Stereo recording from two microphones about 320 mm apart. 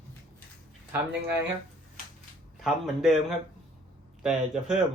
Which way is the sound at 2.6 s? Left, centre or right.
Centre.